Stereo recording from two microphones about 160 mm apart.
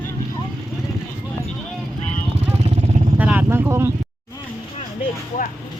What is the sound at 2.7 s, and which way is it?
Vehicle, 40° right (ahead or behind).